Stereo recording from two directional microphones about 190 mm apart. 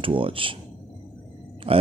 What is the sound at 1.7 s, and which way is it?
Speech, 30° right (ahead or behind).